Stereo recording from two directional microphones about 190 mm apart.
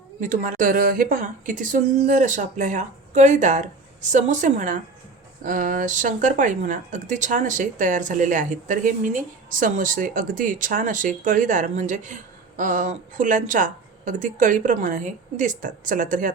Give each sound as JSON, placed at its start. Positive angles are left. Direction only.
{"t": 0.2, "sound": "a woman's voice", "side_deg": -45}